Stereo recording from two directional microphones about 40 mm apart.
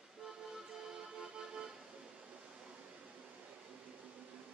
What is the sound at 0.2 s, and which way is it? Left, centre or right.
Music, centre.